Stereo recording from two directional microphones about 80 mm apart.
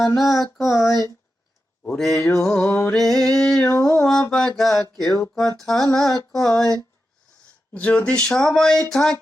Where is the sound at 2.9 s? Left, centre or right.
Centre.